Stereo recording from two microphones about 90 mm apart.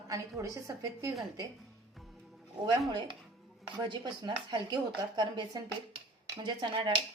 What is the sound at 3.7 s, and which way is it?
Speech, 60° right (ahead or behind).